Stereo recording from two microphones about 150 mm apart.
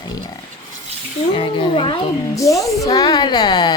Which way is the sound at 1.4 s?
35° left (ahead or behind).